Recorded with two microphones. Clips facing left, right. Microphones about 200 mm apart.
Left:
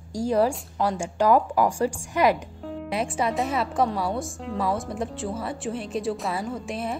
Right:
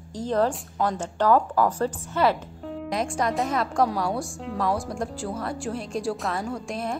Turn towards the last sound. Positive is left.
turn(degrees=5)  # may be behind; listen again after turning